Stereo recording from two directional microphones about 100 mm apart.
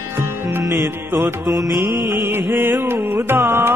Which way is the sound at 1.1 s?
20° right (ahead or behind).